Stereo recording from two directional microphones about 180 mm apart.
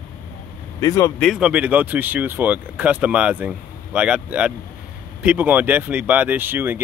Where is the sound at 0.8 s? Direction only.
20° left (ahead or behind).